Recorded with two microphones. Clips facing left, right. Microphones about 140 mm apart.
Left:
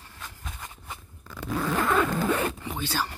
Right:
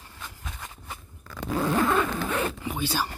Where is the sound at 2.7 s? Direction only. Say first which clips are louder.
Right 2 dB; 10° right (ahead or behind).